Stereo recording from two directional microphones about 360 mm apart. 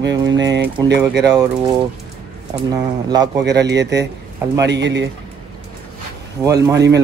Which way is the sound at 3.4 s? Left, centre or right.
Right.